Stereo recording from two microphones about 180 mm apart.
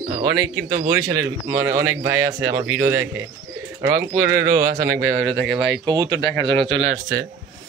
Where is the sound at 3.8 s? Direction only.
15° right (ahead or behind).